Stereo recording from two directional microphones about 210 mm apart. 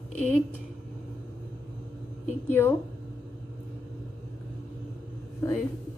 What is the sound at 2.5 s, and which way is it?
Speech, 10° left (ahead or behind).